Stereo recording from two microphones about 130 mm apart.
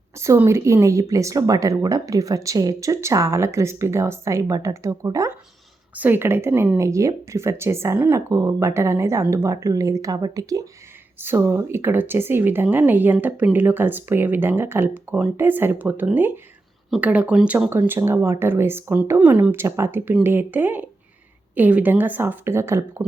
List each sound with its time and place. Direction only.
0.2 s speech: 20° right (ahead or behind)
5.9 s speech: 15° right (ahead or behind)